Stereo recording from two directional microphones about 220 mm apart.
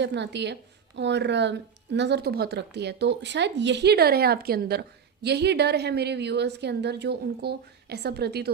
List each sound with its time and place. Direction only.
0.0 s a woman's voice: 50° right (ahead or behind)